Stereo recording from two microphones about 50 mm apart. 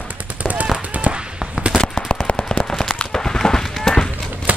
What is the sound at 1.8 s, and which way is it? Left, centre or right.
Machine gun, left.